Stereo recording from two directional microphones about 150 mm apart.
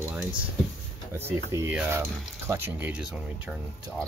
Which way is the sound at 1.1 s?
15° right (ahead or behind).